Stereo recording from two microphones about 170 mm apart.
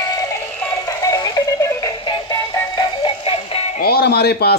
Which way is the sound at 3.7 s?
65° left (ahead or behind).